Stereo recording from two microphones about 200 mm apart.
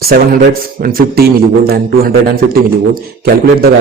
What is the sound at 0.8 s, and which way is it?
A man's voice, 50° right (ahead or behind).